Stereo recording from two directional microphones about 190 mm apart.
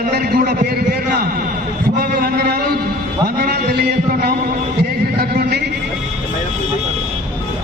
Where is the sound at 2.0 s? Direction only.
55° right (ahead or behind).